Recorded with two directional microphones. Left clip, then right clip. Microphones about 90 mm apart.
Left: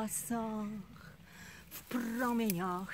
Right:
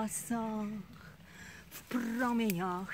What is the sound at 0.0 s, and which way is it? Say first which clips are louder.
Speech: right 1 dB; 25° left (ahead or behind).